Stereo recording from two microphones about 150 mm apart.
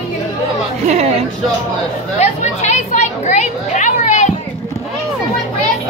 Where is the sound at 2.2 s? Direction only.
50° left (ahead or behind).